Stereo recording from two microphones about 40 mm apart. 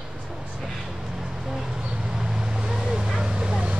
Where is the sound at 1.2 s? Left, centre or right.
Centre; by 3.8 s right.